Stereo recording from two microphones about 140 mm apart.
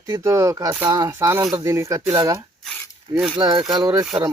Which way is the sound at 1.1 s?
15° right (ahead or behind).